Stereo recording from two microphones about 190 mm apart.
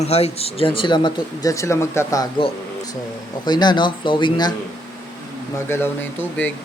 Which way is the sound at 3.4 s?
20° left (ahead or behind).